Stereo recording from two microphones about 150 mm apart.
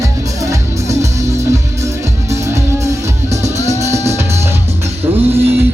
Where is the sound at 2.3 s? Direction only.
20° right (ahead or behind).